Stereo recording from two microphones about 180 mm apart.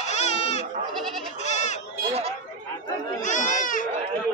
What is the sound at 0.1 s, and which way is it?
Goat, 35° left (ahead or behind).